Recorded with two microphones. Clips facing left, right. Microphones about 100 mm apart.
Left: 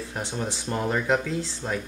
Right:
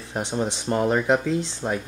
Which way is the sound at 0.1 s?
20° right (ahead or behind).